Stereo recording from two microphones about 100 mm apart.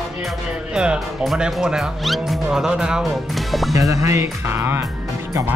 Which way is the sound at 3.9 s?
30° right (ahead or behind).